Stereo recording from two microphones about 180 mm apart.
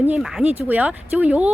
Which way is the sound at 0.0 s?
5° right (ahead or behind).